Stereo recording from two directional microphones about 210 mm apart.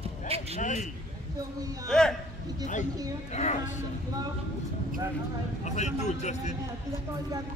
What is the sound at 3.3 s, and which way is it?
Speech, 35° left (ahead or behind).